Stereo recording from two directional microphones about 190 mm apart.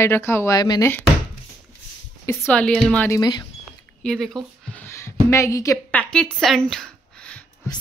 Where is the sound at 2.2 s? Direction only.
10° left (ahead or behind).